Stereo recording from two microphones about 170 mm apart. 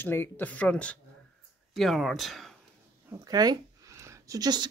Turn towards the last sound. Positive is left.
turn(degrees=-25)  # may be behind; listen again after turning